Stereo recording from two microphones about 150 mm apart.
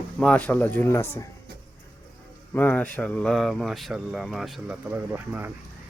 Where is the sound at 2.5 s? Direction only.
10° left (ahead or behind).